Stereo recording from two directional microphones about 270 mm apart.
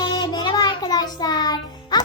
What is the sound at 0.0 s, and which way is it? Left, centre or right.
Music, centre.